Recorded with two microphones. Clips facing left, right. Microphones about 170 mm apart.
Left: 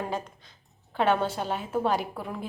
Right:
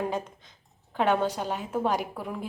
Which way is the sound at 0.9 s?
10° right (ahead or behind).